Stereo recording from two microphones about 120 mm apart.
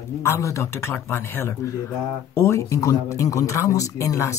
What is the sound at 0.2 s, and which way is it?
Speech, 25° left (ahead or behind).